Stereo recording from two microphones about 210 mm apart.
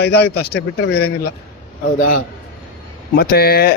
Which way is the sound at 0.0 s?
50° left (ahead or behind).